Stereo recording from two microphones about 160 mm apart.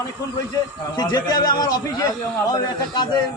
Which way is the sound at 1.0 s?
25° left (ahead or behind).